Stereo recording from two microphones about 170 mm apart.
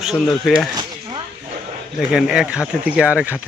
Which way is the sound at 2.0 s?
Centre (ahead or behind).